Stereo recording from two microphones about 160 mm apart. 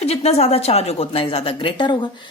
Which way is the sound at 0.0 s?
40° left (ahead or behind).